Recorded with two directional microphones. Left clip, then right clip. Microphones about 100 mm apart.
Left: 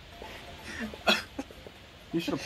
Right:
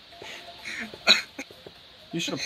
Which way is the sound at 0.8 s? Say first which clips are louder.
Right 6 dB; 15° right (ahead or behind).